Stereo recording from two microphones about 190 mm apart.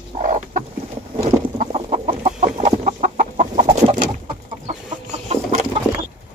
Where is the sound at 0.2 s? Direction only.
40° right (ahead or behind).